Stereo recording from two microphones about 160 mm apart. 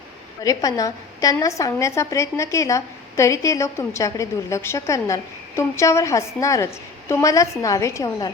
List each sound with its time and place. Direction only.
0.4 s a woman's voice: 20° left (ahead or behind)